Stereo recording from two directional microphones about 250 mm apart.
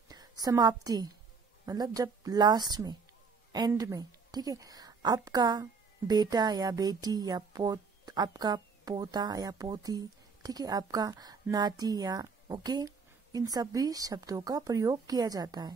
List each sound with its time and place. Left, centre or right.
0.1 s a woman's voice: centre